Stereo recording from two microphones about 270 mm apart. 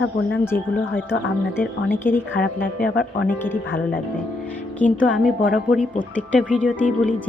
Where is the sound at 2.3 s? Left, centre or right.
Left.